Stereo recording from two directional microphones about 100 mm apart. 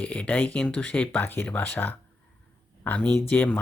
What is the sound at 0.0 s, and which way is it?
Speech, 15° left (ahead or behind).